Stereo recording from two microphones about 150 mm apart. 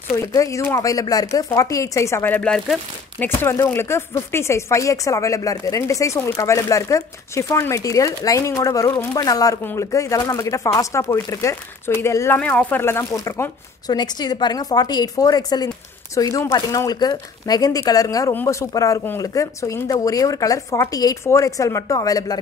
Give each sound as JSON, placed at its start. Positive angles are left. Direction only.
{"t": 0.2, "sound": "speech", "side_deg": 20}
{"t": 3.4, "sound": "speech", "side_deg": 15}